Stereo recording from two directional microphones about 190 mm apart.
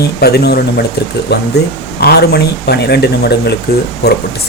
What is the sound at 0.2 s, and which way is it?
Speech, 60° left (ahead or behind).